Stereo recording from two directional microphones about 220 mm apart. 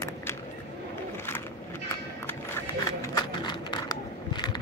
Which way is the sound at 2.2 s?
10° left (ahead or behind).